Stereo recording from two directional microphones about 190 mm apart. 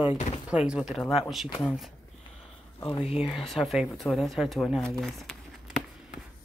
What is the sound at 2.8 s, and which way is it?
Speech, 30° left (ahead or behind).